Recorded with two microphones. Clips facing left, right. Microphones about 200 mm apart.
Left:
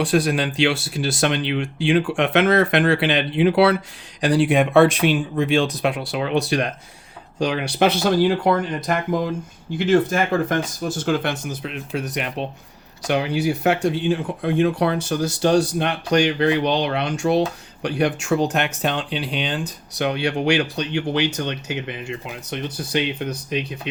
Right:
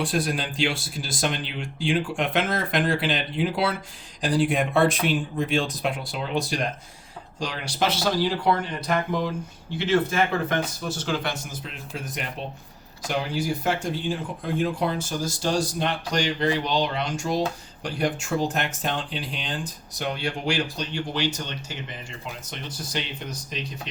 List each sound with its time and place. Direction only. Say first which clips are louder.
0.0 s speech: left 7 dB; 75° left (ahead or behind); by 8.6 s 50° left (ahead or behind)
9.7 s speech: left 5 dB; 50° left (ahead or behind)